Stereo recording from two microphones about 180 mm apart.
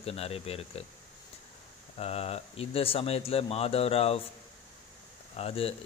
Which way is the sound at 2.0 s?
35° left (ahead or behind).